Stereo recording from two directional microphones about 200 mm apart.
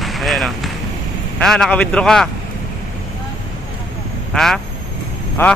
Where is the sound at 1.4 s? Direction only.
5° left (ahead or behind).